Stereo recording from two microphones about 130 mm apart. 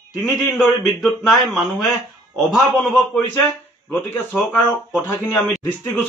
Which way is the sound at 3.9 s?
15° left (ahead or behind).